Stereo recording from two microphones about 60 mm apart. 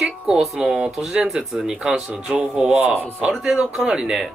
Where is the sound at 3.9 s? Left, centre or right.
Centre.